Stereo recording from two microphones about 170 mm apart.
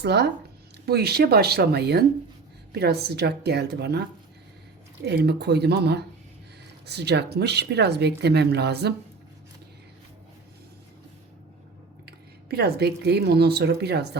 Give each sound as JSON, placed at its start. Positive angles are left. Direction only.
{"t": 0.0, "sound": "speech", "side_deg": -75}
{"t": 5.0, "sound": "speech", "side_deg": -75}
{"t": 12.0, "sound": "a woman's voice", "side_deg": -70}